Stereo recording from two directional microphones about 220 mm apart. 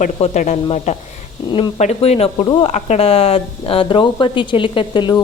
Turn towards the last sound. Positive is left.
turn(degrees=20)  # may be behind; listen again after turning